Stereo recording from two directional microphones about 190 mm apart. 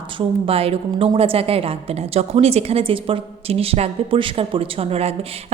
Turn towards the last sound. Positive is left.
turn(degrees=-30)  # may be behind; listen again after turning